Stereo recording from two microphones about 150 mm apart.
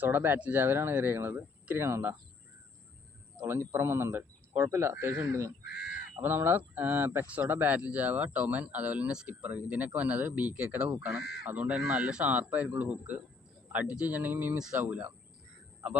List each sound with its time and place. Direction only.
0.0 s speech: 15° right (ahead or behind)
3.3 s speech: 15° right (ahead or behind)